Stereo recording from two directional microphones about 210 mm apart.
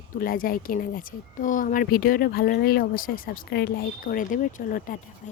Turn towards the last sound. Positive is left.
turn(degrees=40)  # may be behind; listen again after turning